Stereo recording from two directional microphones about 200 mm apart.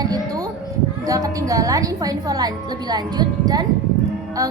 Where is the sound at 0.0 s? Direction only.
20° right (ahead or behind).